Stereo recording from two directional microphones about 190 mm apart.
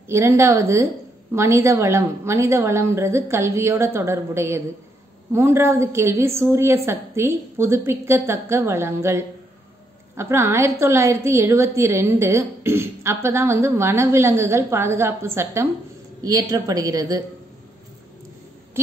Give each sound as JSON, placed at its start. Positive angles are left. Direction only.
{"t": 0.1, "sound": "a woman's voice", "side_deg": -15}